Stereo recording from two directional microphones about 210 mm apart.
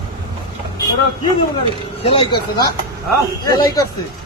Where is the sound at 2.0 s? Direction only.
25° left (ahead or behind).